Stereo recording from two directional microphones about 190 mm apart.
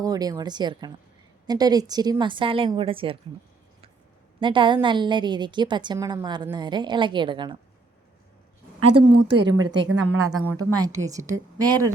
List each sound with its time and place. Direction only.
0.0 s a woman's voice: 20° right (ahead or behind)
4.4 s a woman's voice: 25° right (ahead or behind)
8.8 s a woman's voice: 25° right (ahead or behind)
9.6 s a woman's voice: 80° right
10.5 s a woman's voice: 20° right (ahead or behind)